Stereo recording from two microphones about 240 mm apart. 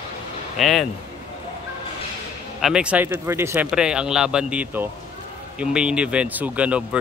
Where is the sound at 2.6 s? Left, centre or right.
Centre.